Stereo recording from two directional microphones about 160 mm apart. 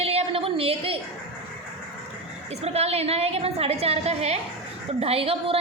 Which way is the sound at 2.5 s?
40° right (ahead or behind).